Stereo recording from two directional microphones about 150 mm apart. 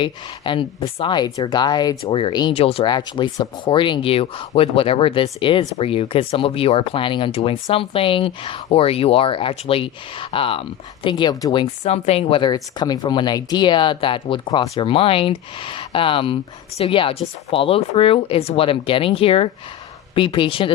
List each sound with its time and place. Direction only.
0.0 s a woman's voice: 35° left (ahead or behind)
2.9 s speech: 30° left (ahead or behind)
11.8 s speech: 45° left (ahead or behind)